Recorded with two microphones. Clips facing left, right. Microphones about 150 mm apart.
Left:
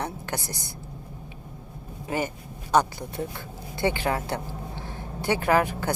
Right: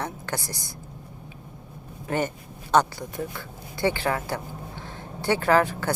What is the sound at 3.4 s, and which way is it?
Speech, 20° left (ahead or behind).